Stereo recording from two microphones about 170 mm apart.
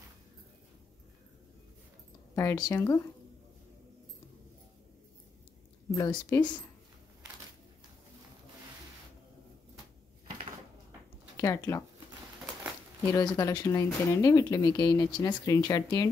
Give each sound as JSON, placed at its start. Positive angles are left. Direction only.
{"t": 2.3, "sound": "speech", "side_deg": 20}
{"t": 5.9, "sound": "speech", "side_deg": 20}
{"t": 11.3, "sound": "speech", "side_deg": 20}
{"t": 13.0, "sound": "speech", "side_deg": 20}